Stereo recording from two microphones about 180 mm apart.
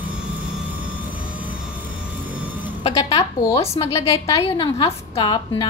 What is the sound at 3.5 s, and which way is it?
A woman's voice, 35° left (ahead or behind).